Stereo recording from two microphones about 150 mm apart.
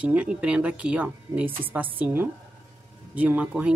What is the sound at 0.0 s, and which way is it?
Speech, 10° right (ahead or behind).